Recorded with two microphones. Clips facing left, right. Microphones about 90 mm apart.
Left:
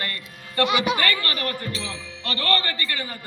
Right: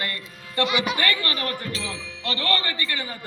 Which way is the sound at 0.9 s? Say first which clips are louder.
Even; 20° right (ahead or behind).